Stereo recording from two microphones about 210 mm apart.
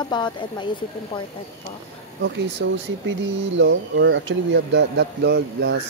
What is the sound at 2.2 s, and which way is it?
Speech, 55° right (ahead or behind).